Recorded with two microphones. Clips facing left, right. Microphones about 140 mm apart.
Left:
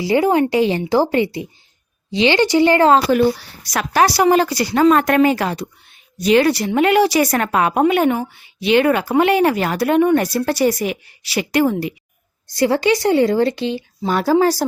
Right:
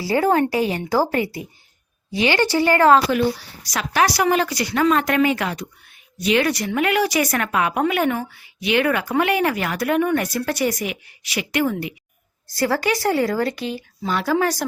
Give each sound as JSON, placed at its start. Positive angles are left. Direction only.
{"t": 0.0, "sound": "speech", "side_deg": 15}
{"t": 3.1, "sound": "a woman's voice", "side_deg": 40}
{"t": 3.6, "sound": "a woman's voice", "side_deg": 55}
{"t": 3.9, "sound": "a woman's voice", "side_deg": 35}
{"t": 4.9, "sound": "a woman's voice", "side_deg": 45}
{"t": 12.5, "sound": "speech", "side_deg": 20}
{"t": 14.1, "sound": "a woman's voice", "side_deg": 40}
{"t": 14.3, "sound": "a woman's voice", "side_deg": 30}